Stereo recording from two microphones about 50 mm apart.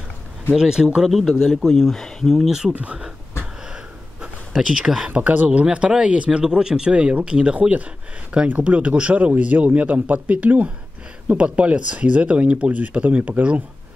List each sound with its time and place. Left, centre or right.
0.6 s speech: centre
1.4 s speech: centre
2.4 s speech: centre
2.7 s speech: right
4.6 s speech: centre
5.1 s speech: right